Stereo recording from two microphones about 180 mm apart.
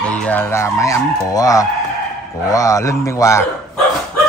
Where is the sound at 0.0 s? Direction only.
5° left (ahead or behind).